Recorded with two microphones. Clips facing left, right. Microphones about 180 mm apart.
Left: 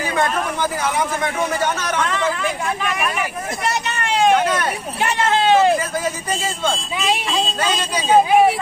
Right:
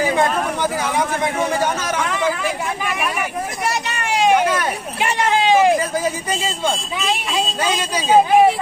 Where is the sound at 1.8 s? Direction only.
10° right (ahead or behind).